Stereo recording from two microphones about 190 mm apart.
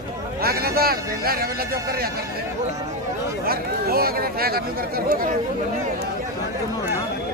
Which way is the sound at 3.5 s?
55° right (ahead or behind).